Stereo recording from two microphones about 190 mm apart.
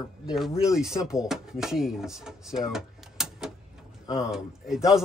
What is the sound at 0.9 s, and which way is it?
Speech, 5° right (ahead or behind).